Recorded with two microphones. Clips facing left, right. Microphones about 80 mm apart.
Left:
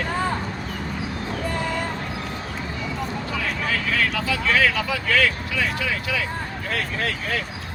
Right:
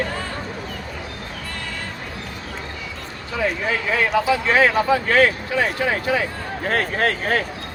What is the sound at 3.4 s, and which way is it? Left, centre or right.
Speech, right.